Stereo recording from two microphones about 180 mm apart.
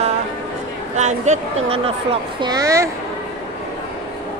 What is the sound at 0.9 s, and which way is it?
Speech, 40° right (ahead or behind).